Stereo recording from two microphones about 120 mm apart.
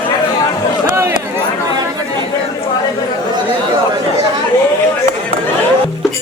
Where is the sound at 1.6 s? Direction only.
30° right (ahead or behind).